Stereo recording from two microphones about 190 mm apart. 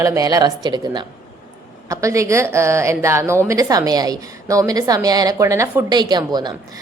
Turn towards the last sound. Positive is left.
turn(degrees=-20)  # may be behind; listen again after turning